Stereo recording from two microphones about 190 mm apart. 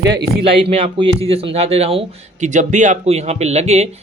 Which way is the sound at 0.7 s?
30° right (ahead or behind).